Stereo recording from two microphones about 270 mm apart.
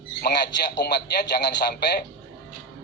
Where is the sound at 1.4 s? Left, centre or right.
Left.